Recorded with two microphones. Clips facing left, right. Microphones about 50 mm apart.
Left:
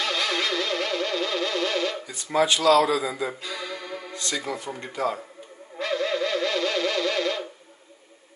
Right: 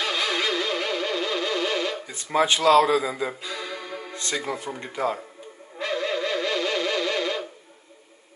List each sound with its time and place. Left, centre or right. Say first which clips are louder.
0.0 s music: right 1 dB; centre
2.0 s a man's voice: right 1 dB; right
3.4 s music: even; centre
4.1 s speech: right 1 dB; right
5.8 s a sound: left 1 dB; centre